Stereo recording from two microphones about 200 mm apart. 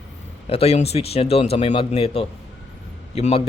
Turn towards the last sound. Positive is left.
turn(degrees=30)  # may be behind; listen again after turning